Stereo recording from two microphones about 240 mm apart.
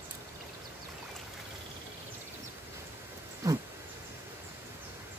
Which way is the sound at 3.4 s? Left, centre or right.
Centre.